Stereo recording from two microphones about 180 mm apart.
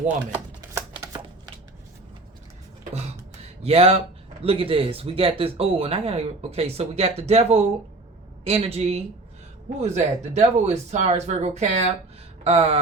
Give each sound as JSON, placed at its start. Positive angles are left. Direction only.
{"t": 0.3, "sound": "shuffling cards", "side_deg": -15}
{"t": 3.6, "sound": "speech", "side_deg": -35}